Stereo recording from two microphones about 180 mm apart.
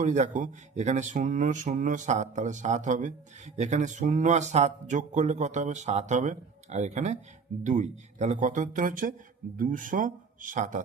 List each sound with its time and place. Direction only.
0.0 s speech: 40° right (ahead or behind)